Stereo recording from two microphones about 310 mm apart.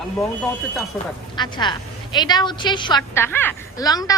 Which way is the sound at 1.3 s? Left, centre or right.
Centre.